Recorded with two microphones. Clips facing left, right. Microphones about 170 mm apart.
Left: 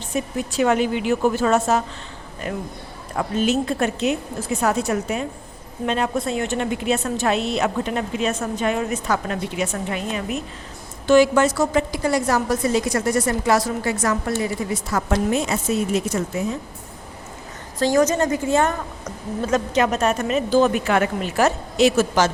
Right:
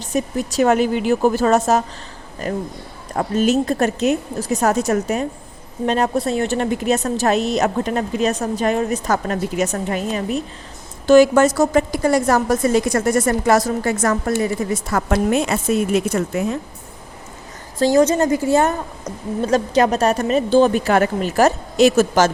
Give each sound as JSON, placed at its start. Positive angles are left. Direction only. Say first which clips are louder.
{"t": 0.1, "sound": "a woman's voice", "louder": "right 4 dB", "side_deg": -40}
{"t": 17.7, "sound": "a woman's voice", "louder": "right 3 dB", "side_deg": -30}
{"t": 19.4, "sound": "a woman's voice", "louder": "right 4 dB", "side_deg": -35}